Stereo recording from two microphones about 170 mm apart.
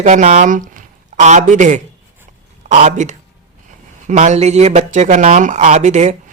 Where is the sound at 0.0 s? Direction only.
45° right (ahead or behind).